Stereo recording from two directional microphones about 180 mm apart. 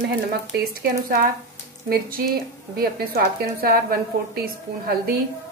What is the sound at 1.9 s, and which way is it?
A woman's voice, 55° right (ahead or behind).